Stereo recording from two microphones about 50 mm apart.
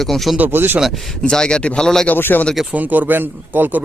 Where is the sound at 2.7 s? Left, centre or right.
Right.